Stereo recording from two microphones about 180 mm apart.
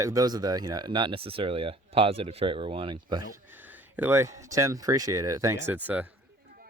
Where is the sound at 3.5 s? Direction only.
10° right (ahead or behind).